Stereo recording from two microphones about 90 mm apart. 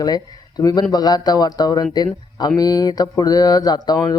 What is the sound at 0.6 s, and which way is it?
Speech, 45° left (ahead or behind).